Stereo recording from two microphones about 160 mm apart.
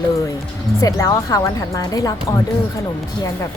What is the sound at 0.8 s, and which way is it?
Speech, 20° left (ahead or behind).